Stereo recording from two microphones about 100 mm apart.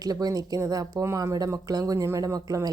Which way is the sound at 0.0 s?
40° right (ahead or behind).